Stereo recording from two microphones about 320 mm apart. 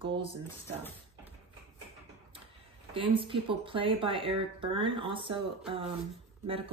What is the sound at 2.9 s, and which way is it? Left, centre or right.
Speech, centre.